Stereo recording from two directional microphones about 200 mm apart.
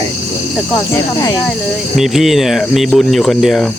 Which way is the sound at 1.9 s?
Centre (ahead or behind).